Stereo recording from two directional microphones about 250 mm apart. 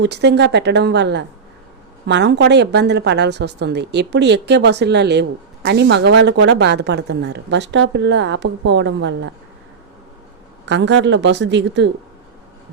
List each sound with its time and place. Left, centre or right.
0.0 s a woman's voice: right
10.7 s a woman's voice: right